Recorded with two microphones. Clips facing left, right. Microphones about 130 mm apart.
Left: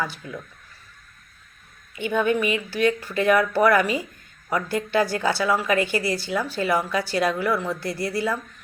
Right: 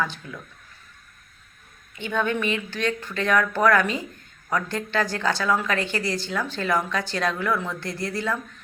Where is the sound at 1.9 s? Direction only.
10° left (ahead or behind).